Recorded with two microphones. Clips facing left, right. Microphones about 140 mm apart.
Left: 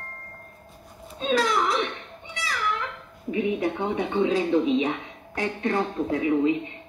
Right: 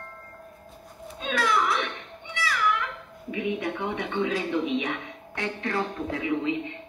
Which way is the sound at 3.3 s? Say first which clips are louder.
Left 4 dB; 30° left (ahead or behind).